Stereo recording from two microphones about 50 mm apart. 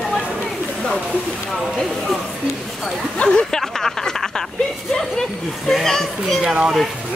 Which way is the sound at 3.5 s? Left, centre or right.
Centre.